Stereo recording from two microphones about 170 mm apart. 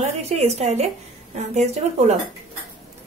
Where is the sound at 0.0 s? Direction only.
40° right (ahead or behind).